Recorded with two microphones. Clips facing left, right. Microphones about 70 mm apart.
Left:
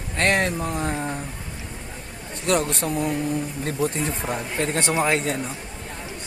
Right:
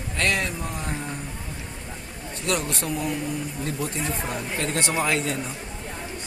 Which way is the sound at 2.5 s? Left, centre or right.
Left.